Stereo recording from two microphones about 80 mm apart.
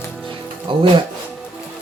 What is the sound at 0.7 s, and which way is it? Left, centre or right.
Speech, right.